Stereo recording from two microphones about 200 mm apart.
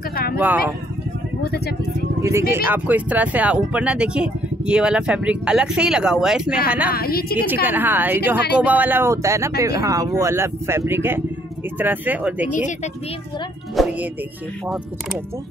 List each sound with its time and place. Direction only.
0.1 s a sound: 50° left (ahead or behind)
0.4 s speech: 10° right (ahead or behind)
2.2 s speech: 15° right (ahead or behind)
6.9 s a woman's voice: 50° left (ahead or behind)
7.6 s speech: 10° right (ahead or behind)
12.5 s speech: 40° left (ahead or behind)
13.8 s music: centre (ahead or behind)